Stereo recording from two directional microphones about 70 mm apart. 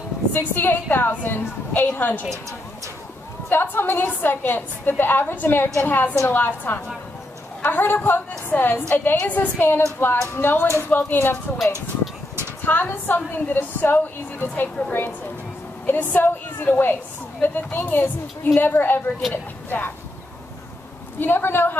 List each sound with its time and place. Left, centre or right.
0.3 s a woman's voice: left
3.4 s a woman's voice: left
12.6 s a woman's voice: left
21.2 s speech: left